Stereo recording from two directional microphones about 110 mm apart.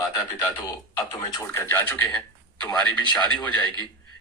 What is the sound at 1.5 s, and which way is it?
Speech, 20° left (ahead or behind).